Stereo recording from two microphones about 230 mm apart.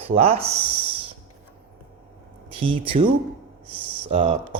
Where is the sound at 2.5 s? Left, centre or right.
Right.